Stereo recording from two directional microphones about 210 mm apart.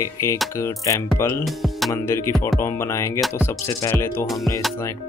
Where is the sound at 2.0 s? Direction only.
10° left (ahead or behind).